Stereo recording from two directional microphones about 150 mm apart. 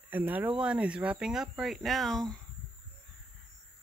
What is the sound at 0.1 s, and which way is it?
Speech, 10° right (ahead or behind).